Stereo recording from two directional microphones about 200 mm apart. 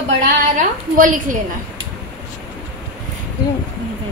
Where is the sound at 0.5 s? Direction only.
40° right (ahead or behind).